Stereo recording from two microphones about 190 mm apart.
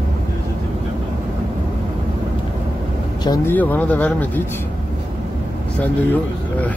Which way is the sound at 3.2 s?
20° left (ahead or behind).